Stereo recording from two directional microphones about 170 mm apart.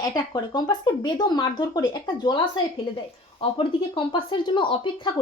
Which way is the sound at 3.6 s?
30° left (ahead or behind).